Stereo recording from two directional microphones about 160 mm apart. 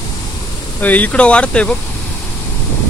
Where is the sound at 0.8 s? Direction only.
10° left (ahead or behind).